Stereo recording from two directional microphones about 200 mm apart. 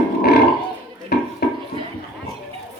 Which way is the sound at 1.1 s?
55° left (ahead or behind).